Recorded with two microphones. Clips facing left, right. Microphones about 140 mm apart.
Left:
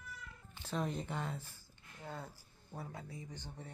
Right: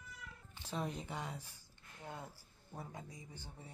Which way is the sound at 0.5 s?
10° right (ahead or behind).